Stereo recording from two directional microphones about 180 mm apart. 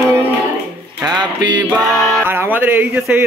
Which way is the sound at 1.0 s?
25° right (ahead or behind).